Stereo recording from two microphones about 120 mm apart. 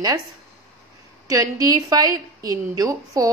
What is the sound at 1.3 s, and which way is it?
A woman's voice, 30° right (ahead or behind).